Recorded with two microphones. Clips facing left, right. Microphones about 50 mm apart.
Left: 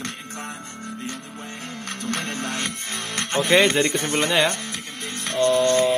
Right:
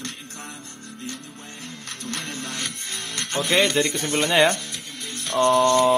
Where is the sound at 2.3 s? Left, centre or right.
Left.